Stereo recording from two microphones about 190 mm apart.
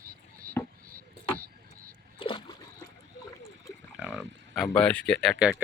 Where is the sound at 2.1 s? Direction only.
25° left (ahead or behind).